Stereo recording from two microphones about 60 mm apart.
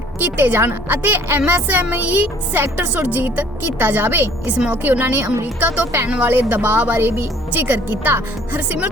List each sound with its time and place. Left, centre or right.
0.2 s a woman's voice: right